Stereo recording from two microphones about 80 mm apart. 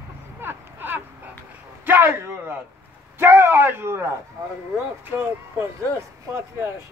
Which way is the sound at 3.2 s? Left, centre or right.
Right.